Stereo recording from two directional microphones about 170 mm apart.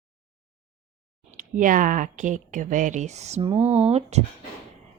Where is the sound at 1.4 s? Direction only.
50° right (ahead or behind).